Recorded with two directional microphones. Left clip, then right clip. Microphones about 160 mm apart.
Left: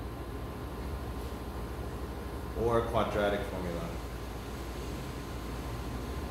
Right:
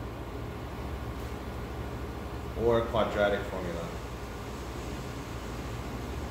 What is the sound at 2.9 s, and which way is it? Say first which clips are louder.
Speech: right 2 dB; 45° left (ahead or behind).